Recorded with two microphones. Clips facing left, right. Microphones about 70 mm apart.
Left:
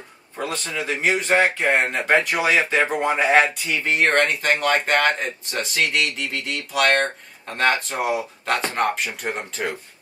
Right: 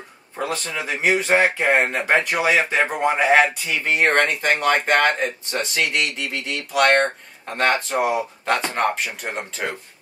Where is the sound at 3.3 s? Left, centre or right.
Centre.